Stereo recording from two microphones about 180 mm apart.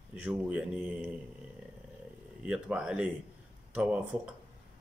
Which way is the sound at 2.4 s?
5° right (ahead or behind).